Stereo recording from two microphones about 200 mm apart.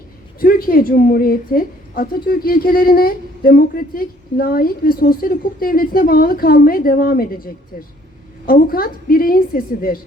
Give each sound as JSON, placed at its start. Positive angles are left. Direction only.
{"t": 0.3, "sound": "a woman's voice", "side_deg": 45}